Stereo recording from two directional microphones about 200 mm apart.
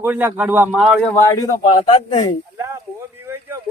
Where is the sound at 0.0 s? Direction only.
10° right (ahead or behind).